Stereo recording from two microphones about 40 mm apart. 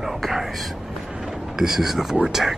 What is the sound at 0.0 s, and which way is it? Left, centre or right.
Whispering, centre.